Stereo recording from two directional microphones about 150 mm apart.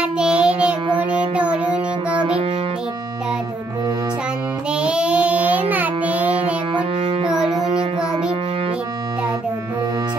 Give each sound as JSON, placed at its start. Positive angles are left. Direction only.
{"t": 0.0, "sound": "child singing", "side_deg": -5}
{"t": 0.9, "sound": "music", "side_deg": -10}
{"t": 4.6, "sound": "child singing", "side_deg": -5}
{"t": 6.7, "sound": "music", "side_deg": -35}